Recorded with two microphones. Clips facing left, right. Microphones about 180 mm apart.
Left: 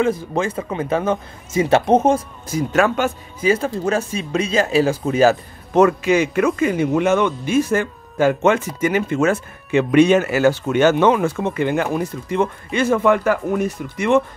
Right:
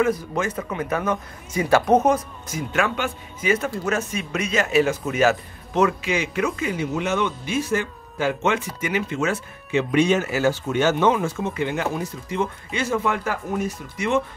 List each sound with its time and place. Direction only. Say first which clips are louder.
0.0 s speech: left 3 dB; 30° left (ahead or behind)
5.7 s speech: left 7 dB; 50° left (ahead or behind)